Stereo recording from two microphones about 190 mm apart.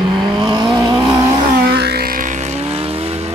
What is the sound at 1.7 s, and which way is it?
Vehicle, 60° right (ahead or behind).